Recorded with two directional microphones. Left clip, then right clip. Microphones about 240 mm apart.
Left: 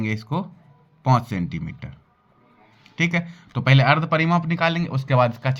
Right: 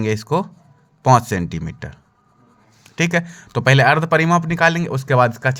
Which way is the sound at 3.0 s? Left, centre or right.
Right.